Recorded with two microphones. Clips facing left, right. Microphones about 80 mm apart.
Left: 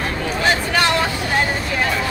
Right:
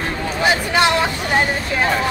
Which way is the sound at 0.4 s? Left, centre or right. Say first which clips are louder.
Right 2 dB; centre.